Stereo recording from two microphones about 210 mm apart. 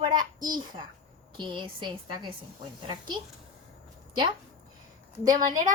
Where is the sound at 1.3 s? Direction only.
25° right (ahead or behind).